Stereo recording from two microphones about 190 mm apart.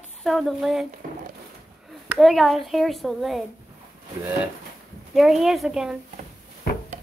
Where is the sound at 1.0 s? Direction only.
45° right (ahead or behind).